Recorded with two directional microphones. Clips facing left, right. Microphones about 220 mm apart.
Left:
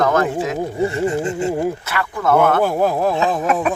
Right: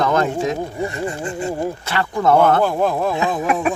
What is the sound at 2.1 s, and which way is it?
Speech, 25° right (ahead or behind).